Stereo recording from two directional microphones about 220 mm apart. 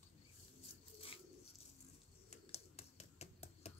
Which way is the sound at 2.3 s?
30° left (ahead or behind).